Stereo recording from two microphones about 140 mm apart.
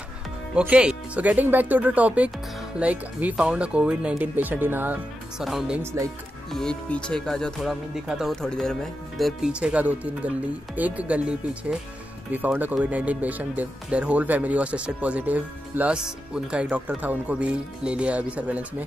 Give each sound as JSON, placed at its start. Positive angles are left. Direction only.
{"t": 0.6, "sound": "speech", "side_deg": -10}
{"t": 5.4, "sound": "speech", "side_deg": 0}
{"t": 5.8, "sound": "speech", "side_deg": -20}
{"t": 6.5, "sound": "speech", "side_deg": 5}
{"t": 9.2, "sound": "speech", "side_deg": -5}